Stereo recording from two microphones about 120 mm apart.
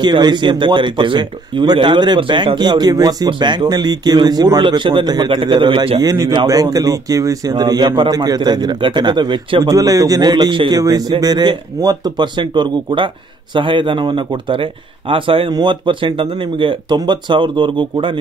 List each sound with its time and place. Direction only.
0.0 s speech: 40° right (ahead or behind)
5.9 s a man's voice: 30° right (ahead or behind)